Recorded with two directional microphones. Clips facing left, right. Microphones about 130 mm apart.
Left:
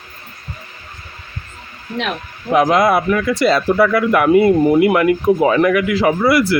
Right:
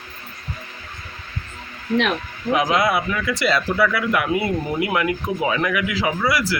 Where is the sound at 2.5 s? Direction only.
50° left (ahead or behind).